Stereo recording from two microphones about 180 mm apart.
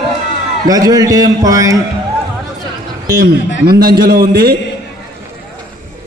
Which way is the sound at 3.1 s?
55° right (ahead or behind).